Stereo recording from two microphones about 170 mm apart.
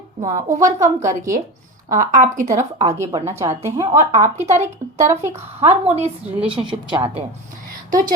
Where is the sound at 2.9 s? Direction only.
15° right (ahead or behind).